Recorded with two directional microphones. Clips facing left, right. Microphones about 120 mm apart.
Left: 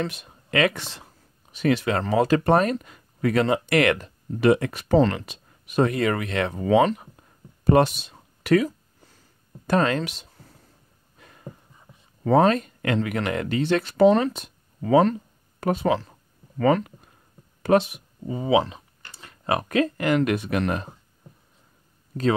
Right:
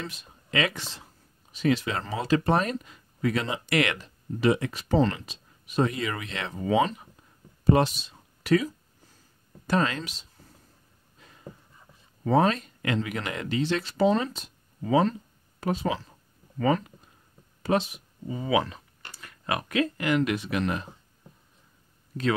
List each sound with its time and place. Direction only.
0.0 s speech: 65° left (ahead or behind)
7.6 s a sound: 60° left (ahead or behind)
9.7 s speech: 50° left (ahead or behind)
12.3 s speech: 55° left (ahead or behind)
18.5 s speech: 20° left (ahead or behind); by 20.9 s 50° left (ahead or behind)